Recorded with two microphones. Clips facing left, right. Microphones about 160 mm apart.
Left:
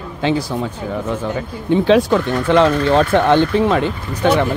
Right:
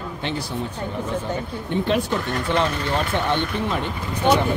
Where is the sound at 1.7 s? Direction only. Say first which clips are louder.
Left 9 dB; 90° left.